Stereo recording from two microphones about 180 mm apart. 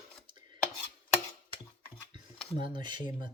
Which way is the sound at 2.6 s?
25° right (ahead or behind).